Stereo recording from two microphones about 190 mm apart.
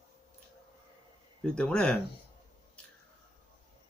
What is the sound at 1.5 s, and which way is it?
Speech, 5° left (ahead or behind).